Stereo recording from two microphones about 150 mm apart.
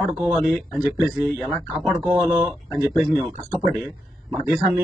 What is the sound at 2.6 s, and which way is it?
Speech, 25° left (ahead or behind).